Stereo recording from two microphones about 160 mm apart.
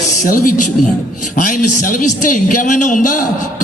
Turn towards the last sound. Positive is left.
turn(degrees=50)  # may be behind; listen again after turning